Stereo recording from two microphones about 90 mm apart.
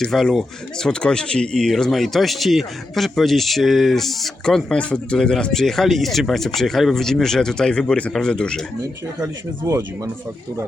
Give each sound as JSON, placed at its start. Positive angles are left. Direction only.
{"t": 0.0, "sound": "speech", "side_deg": 5}
{"t": 9.6, "sound": "speech", "side_deg": -35}